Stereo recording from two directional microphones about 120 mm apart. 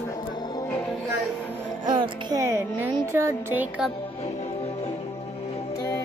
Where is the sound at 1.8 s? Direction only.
40° right (ahead or behind).